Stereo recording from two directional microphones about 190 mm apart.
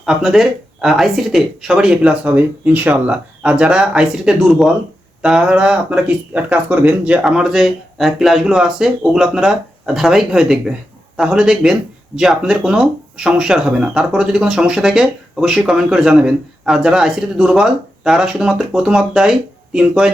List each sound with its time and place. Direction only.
0.0 s speech: centre (ahead or behind)